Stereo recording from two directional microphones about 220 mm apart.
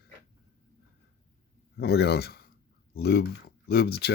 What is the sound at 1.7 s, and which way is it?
Speech, 50° left (ahead or behind).